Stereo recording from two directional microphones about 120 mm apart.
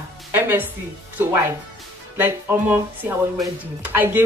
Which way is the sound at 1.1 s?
20° right (ahead or behind).